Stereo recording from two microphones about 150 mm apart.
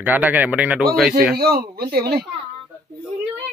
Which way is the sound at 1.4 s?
90° right.